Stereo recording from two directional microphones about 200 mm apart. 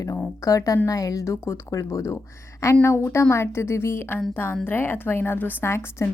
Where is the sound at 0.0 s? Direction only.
15° left (ahead or behind).